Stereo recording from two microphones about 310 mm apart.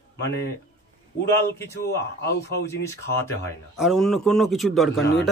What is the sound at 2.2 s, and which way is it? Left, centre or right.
Speech, left.